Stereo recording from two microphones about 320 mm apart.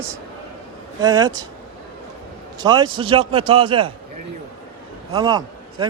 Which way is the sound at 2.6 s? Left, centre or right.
Centre.